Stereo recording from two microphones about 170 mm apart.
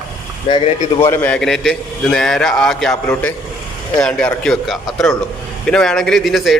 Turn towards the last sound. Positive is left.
turn(degrees=0)  # may be behind; listen again after turning